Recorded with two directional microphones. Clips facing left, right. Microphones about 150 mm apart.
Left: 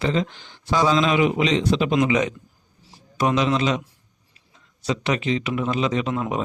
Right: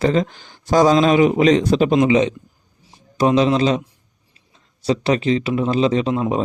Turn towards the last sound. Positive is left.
turn(degrees=-30)  # may be behind; listen again after turning